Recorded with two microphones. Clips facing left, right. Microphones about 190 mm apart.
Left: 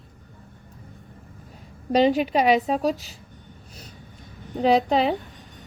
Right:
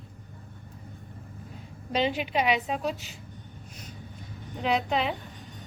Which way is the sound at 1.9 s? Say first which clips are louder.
Left 8 dB; 40° left (ahead or behind).